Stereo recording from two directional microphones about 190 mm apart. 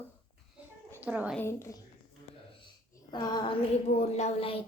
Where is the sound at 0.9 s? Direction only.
10° right (ahead or behind).